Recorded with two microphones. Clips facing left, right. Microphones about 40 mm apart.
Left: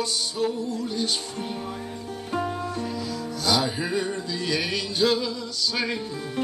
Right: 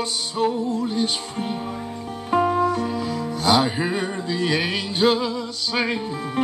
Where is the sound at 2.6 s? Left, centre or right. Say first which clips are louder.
Right 9 dB; right.